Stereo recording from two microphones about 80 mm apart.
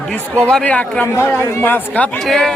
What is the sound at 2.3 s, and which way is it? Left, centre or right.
Speech, centre.